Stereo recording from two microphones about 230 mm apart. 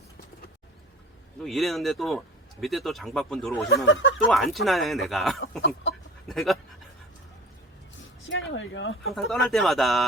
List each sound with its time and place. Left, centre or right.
1.4 s speech: centre
3.8 s speech: left
4.3 s speech: centre
5.4 s speech: left
6.2 s speech: centre
8.3 s speech: left
9.1 s speech: centre